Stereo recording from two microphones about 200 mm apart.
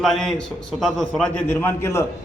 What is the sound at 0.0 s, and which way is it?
A man's voice, centre (ahead or behind).